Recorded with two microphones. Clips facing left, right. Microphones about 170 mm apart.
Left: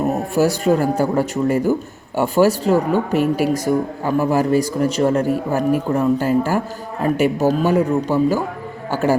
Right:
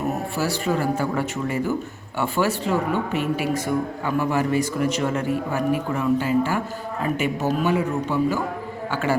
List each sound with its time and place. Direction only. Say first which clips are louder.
0.3 s speech: left 10 dB; 45° left (ahead or behind)